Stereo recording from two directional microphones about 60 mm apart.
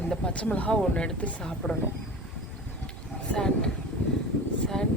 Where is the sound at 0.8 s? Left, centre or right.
Centre.